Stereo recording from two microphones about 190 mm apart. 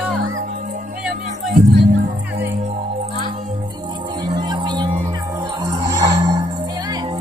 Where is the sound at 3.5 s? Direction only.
25° right (ahead or behind).